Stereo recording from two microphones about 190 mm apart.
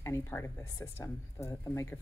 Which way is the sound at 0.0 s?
15° left (ahead or behind).